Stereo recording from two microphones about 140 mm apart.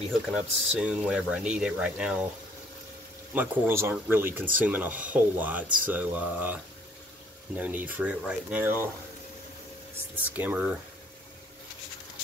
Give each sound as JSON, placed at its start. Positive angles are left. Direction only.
{"t": 0.1, "sound": "speech", "side_deg": -5}
{"t": 3.3, "sound": "speech", "side_deg": -15}
{"t": 10.1, "sound": "speech", "side_deg": -10}